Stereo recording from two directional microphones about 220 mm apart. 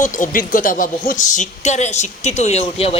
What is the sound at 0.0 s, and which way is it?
A woman's voice, 35° left (ahead or behind).